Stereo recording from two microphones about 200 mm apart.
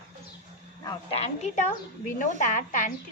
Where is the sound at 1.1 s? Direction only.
35° left (ahead or behind).